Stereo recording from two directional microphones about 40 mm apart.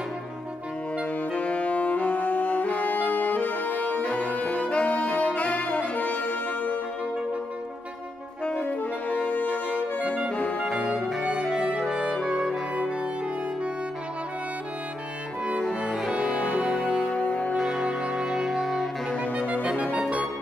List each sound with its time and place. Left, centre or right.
1.3 s saxophone: left
9.1 s brass instrument: left
9.5 s music: right
11.0 s music: centre
11.3 s music: centre
16.2 s music: right
17.2 s music: left
17.6 s music: centre
19.3 s music: right